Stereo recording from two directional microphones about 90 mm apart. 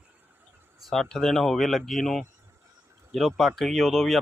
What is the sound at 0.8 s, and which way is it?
Speech, 5° left (ahead or behind).